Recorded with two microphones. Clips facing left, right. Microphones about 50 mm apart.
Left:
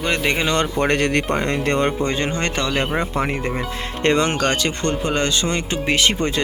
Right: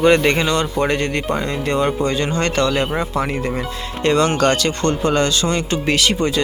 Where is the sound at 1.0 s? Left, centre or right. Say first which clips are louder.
Left 2 dB; left.